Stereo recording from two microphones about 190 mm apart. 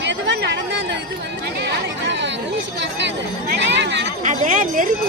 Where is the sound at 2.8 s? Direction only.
65° right (ahead or behind).